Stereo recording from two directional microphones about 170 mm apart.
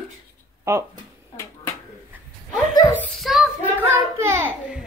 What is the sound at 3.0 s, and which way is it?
Speech, centre (ahead or behind).